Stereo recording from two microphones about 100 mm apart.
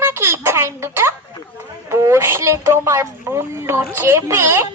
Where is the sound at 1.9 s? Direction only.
30° right (ahead or behind).